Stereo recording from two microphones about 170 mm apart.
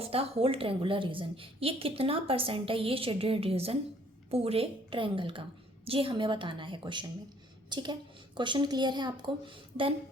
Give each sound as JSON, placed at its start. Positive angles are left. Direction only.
{"t": 0.0, "sound": "a woman's voice", "side_deg": -35}